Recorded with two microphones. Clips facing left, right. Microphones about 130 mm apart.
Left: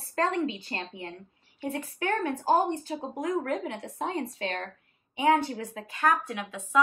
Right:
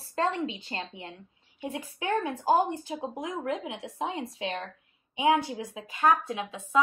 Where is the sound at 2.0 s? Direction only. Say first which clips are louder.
Even; 15° right (ahead or behind).